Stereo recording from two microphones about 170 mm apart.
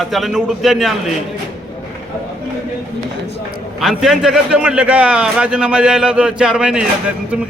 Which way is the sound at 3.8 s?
Centre (ahead or behind).